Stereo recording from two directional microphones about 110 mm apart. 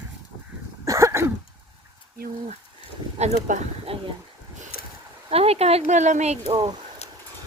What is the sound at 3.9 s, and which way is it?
Speech, 60° right (ahead or behind).